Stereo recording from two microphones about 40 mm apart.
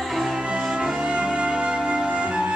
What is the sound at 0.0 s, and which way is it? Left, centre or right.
Music, centre.